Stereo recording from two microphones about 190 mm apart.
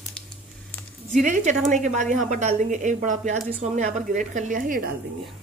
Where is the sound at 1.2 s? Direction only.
40° right (ahead or behind).